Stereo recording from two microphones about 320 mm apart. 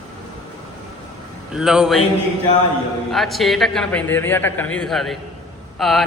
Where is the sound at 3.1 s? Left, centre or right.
Centre.